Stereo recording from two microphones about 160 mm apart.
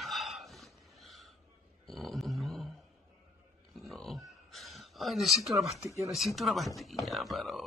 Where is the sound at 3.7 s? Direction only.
Centre (ahead or behind).